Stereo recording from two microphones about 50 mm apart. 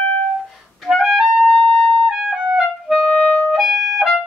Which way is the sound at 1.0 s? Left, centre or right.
Centre.